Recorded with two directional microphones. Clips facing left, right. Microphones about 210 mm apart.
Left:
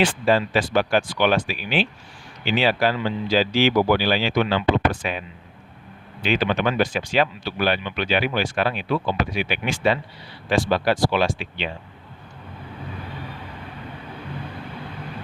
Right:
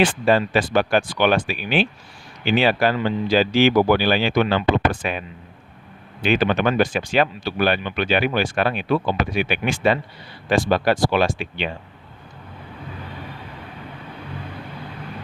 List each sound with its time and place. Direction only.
0.0 s speech: 50° right (ahead or behind)
6.2 s speech: 50° right (ahead or behind)